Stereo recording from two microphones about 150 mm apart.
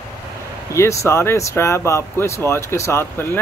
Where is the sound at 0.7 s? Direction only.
20° left (ahead or behind).